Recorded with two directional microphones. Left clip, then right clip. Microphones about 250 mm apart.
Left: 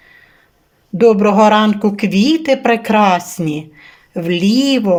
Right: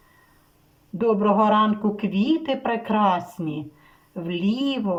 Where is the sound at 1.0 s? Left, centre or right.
Left.